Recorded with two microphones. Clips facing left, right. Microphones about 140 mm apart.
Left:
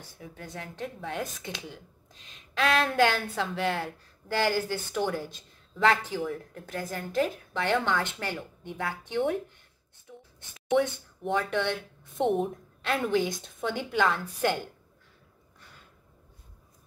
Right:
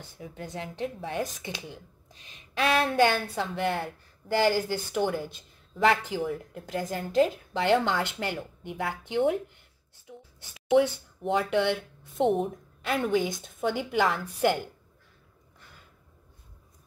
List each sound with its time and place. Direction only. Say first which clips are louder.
0.5 s a woman's voice: right 4 dB; 15° right (ahead or behind); by 3.9 s centre (ahead or behind)
4.6 s a woman's voice: right 2 dB; 10° right (ahead or behind)
6.6 s a woman's voice: right 5 dB; 15° right (ahead or behind)